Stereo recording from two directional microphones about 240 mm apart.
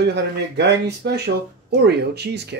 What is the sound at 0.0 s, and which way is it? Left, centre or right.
Speech, right.